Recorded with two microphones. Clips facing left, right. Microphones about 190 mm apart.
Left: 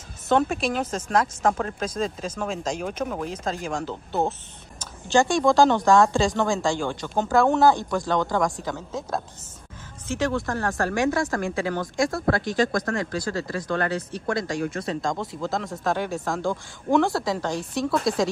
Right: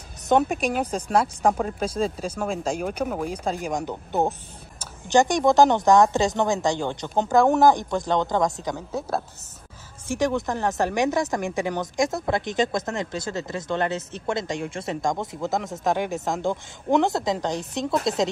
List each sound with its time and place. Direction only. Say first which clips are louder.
0.3 s speech: right 1 dB; 15° right (ahead or behind)